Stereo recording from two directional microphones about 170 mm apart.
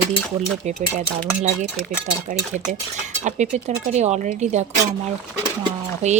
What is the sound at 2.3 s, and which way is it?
Speech, 45° right (ahead or behind).